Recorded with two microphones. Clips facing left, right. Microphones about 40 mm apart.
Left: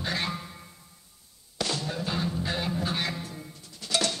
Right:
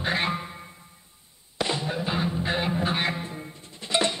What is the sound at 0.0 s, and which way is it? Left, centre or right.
Music, right.